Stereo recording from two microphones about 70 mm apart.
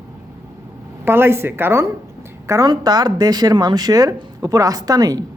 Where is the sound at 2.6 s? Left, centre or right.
Right.